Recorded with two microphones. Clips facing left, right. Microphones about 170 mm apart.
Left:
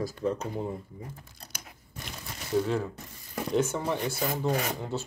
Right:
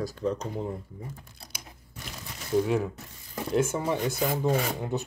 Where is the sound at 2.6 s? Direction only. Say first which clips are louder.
Right 3 dB; 15° right (ahead or behind).